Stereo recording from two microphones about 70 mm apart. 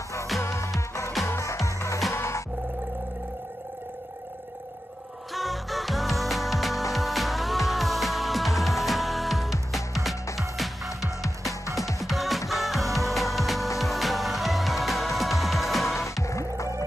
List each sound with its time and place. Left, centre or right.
0.4 s music: left
5.3 s music: centre
12.0 s music: centre
16.0 s music: left